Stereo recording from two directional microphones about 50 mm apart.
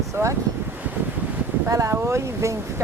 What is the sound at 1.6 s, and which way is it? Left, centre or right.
Speech, right.